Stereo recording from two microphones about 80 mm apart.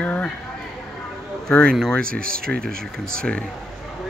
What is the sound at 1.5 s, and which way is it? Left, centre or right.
Speech, centre.